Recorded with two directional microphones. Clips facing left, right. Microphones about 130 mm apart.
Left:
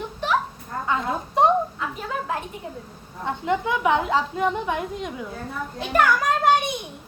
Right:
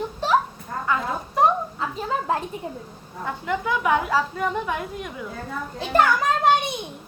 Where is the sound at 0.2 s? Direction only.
30° right (ahead or behind).